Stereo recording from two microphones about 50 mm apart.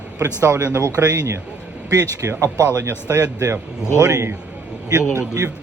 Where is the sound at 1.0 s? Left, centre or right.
Right.